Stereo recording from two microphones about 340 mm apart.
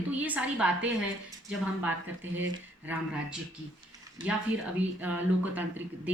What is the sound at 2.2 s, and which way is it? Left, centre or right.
Speech, right.